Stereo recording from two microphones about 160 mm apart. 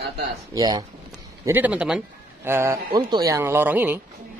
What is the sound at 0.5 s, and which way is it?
Speech, 25° right (ahead or behind).